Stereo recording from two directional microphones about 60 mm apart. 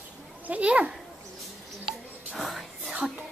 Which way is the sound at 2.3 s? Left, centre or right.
Centre.